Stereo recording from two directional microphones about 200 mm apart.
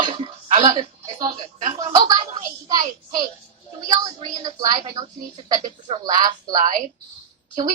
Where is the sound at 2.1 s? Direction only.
20° right (ahead or behind).